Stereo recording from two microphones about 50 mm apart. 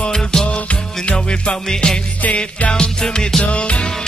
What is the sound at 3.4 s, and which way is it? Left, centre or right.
Music, left.